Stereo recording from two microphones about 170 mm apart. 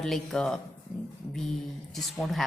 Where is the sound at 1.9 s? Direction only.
Centre (ahead or behind).